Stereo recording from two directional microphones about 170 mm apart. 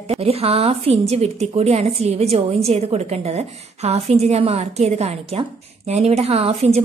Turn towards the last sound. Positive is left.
turn(degrees=-40)  # may be behind; listen again after turning